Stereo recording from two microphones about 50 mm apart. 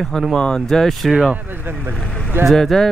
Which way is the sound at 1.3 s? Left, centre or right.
Right.